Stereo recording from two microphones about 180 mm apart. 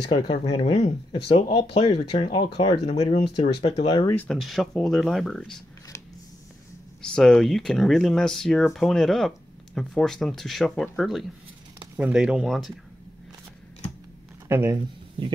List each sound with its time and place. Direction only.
0.1 s speech: 30° left (ahead or behind)
4.1 s speech: 5° left (ahead or behind)
7.0 s speech: 5° left (ahead or behind)
14.5 s speech: 15° right (ahead or behind)